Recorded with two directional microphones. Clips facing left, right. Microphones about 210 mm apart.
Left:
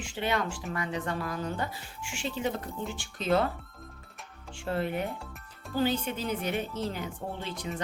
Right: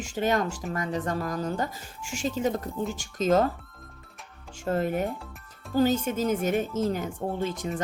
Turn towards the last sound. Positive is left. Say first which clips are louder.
# right 6 dB
turn(degrees=-45)  # may be behind; listen again after turning